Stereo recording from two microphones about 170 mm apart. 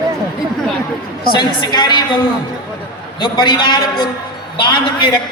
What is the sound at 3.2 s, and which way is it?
Speech, 25° left (ahead or behind).